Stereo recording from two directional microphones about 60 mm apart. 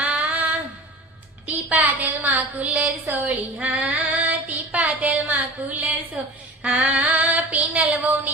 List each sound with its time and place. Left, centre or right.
0.0 s a sound: right
1.7 s a woman's voice: right
6.6 s female singing: right